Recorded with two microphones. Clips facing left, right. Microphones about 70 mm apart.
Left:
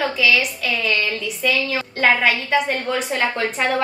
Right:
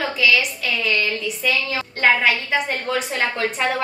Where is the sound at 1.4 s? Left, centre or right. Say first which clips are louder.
Left 3 dB; centre.